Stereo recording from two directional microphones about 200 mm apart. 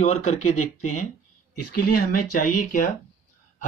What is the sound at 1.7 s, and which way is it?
Speech, 45° left (ahead or behind).